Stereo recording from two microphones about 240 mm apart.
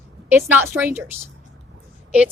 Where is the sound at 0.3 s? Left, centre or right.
Centre.